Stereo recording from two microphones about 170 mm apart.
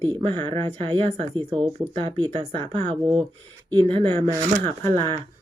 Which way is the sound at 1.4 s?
5° right (ahead or behind).